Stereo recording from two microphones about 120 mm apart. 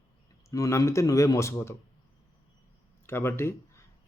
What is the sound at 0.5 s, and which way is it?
Speech, 25° left (ahead or behind).